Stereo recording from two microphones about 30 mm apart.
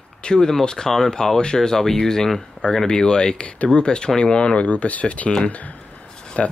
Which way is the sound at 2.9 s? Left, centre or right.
Left.